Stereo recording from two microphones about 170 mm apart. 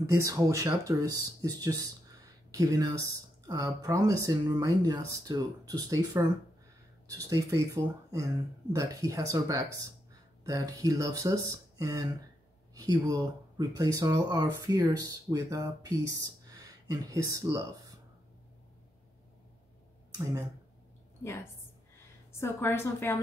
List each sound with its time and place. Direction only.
0.2 s speech: 20° right (ahead or behind)
22.4 s a woman's voice: 15° left (ahead or behind)